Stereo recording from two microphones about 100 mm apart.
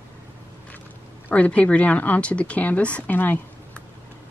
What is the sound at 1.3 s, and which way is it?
Speech, 15° left (ahead or behind).